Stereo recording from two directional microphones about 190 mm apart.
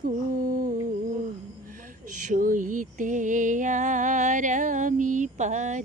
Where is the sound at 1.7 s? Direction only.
45° right (ahead or behind).